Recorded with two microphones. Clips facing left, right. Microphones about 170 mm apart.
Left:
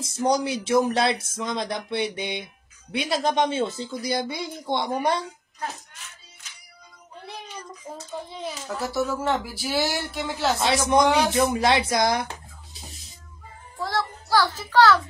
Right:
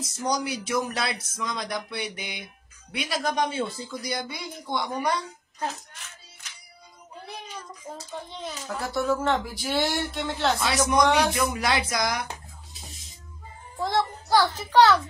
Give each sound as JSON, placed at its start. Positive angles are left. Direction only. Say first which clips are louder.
{"t": 0.2, "sound": "speech", "louder": "left 5 dB", "side_deg": 25}
{"t": 7.2, "sound": "speech", "louder": "left 2 dB", "side_deg": 0}
{"t": 10.6, "sound": "speech", "louder": "left 4 dB", "side_deg": 25}
{"t": 13.7, "sound": "a child's voice", "louder": "right 2 dB", "side_deg": -20}